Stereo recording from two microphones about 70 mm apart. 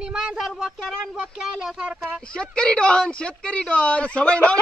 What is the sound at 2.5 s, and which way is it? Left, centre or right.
Speech, centre.